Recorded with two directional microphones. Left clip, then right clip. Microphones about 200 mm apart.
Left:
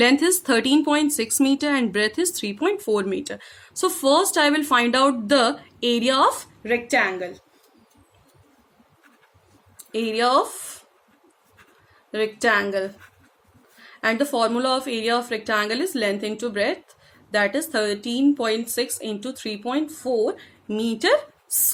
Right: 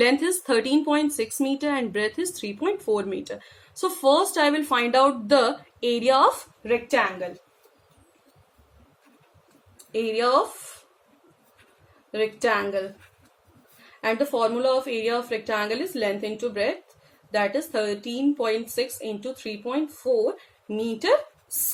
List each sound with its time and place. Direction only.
0.0 s speech: 60° left (ahead or behind)
9.9 s speech: 60° left (ahead or behind)
12.1 s speech: 60° left (ahead or behind)
14.0 s speech: 60° left (ahead or behind)